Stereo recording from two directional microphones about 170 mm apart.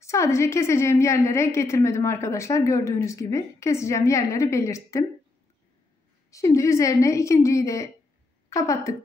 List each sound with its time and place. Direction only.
0.0 s a woman's voice: 15° left (ahead or behind)
6.3 s a woman's voice: 20° left (ahead or behind)